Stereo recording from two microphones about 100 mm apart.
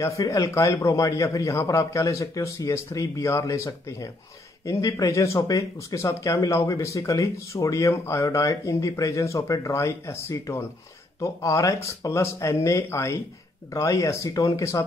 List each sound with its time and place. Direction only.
0.0 s speech: 30° left (ahead or behind)